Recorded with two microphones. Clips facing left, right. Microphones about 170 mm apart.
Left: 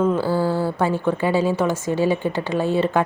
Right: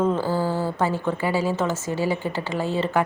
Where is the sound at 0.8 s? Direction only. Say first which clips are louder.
Left 3 dB; 15° left (ahead or behind).